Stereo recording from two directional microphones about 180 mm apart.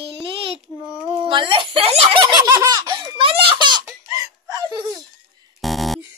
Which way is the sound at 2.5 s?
20° right (ahead or behind).